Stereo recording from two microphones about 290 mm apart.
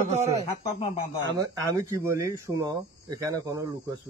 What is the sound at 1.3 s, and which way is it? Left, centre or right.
Speech, centre.